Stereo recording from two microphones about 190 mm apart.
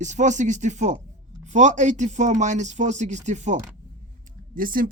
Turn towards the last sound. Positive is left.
turn(degrees=-50)  # may be behind; listen again after turning